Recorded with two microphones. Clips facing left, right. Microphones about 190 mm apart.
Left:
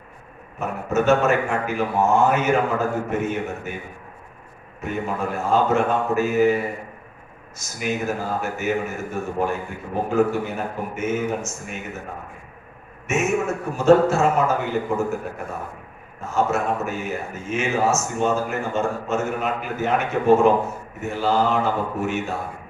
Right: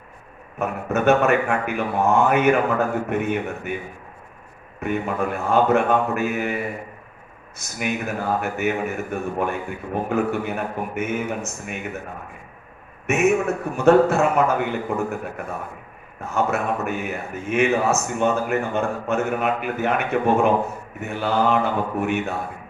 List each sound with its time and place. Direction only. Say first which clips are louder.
0.6 s speech: right 1 dB; 60° right (ahead or behind)
4.8 s speech: right 2 dB; 60° right (ahead or behind)
7.6 s speech: left 1 dB; 60° right (ahead or behind)
13.1 s a man's voice: right 3 dB; 60° right (ahead or behind)
16.2 s speech: left 1 dB; 60° right (ahead or behind)